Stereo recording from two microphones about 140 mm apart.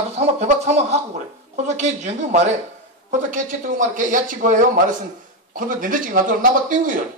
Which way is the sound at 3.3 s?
70° right (ahead or behind).